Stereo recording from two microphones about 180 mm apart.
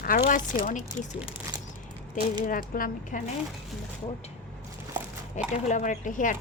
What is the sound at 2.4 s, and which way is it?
Speech, 50° left (ahead or behind).